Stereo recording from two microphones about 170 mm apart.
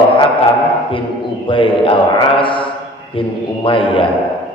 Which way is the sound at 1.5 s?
30° left (ahead or behind).